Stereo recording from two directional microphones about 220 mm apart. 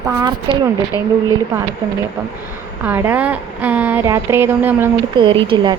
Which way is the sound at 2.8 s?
10° right (ahead or behind).